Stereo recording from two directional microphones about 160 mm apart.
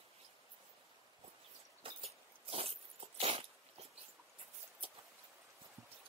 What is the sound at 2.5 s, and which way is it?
Dog, 35° right (ahead or behind).